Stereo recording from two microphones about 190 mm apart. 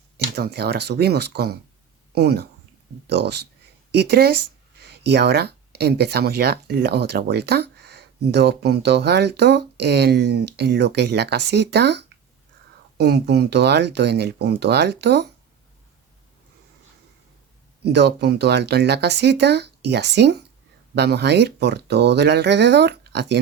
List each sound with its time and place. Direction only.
0.3 s speech: 60° right (ahead or behind)
17.8 s speech: 60° right (ahead or behind)